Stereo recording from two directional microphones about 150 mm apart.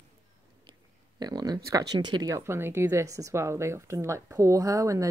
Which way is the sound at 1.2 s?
25° right (ahead or behind).